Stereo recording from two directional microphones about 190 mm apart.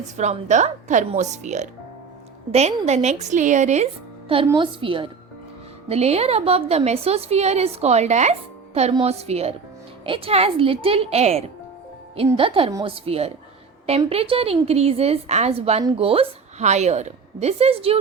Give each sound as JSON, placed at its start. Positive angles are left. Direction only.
{"t": 0.2, "sound": "a woman's voice", "side_deg": -40}
{"t": 2.5, "sound": "a woman's voice", "side_deg": -35}
{"t": 4.5, "sound": "a woman's voice", "side_deg": -25}